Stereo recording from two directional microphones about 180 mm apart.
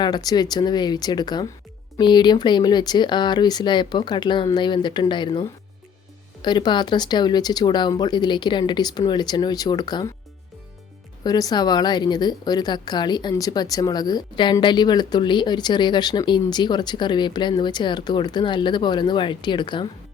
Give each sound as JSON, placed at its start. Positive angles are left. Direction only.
{"t": 0.0, "sound": "a woman's voice", "side_deg": 20}
{"t": 11.2, "sound": "a woman's voice", "side_deg": 20}